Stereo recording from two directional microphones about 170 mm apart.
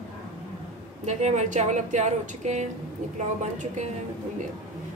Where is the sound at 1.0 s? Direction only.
45° right (ahead or behind).